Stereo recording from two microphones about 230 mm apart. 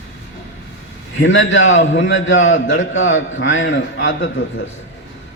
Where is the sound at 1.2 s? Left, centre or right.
Left.